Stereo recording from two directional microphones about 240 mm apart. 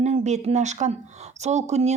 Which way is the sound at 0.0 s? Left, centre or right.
Right.